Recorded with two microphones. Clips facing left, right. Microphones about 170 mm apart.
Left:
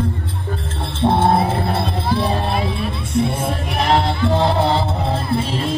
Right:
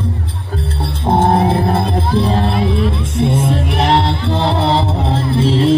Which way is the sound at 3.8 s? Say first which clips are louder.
Even; 75° right (ahead or behind).